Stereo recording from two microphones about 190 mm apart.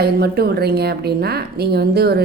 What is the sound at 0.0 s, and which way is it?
A woman's voice, 55° right (ahead or behind).